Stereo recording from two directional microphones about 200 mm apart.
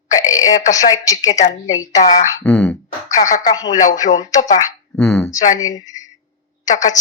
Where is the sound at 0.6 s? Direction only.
15° left (ahead or behind).